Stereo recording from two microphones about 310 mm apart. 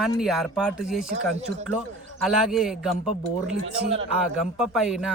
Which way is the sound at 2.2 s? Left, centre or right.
Centre.